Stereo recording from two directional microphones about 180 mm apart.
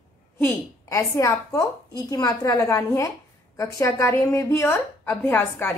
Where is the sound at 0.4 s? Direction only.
15° left (ahead or behind).